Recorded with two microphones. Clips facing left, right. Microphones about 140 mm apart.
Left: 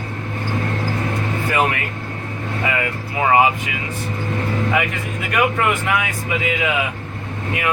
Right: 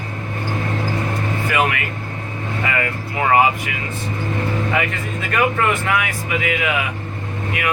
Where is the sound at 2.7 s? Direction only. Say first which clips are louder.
Even; 15° left (ahead or behind).